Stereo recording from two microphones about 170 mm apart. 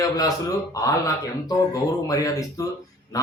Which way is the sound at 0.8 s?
20° left (ahead or behind).